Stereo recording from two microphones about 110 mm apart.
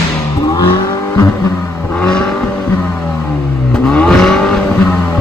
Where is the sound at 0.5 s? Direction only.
35° left (ahead or behind).